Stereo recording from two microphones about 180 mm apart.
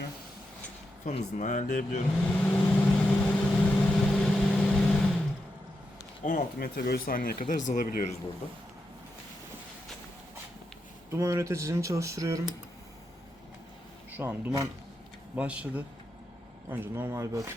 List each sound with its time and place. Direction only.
1.0 s speech: 45° left (ahead or behind)
2.2 s vehicle: 10° left (ahead or behind)
6.2 s speech: 50° left (ahead or behind)
11.1 s speech: 15° right (ahead or behind)
14.1 s speech: 10° right (ahead or behind)